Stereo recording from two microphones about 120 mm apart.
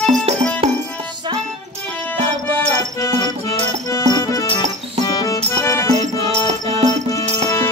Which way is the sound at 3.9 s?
30° left (ahead or behind).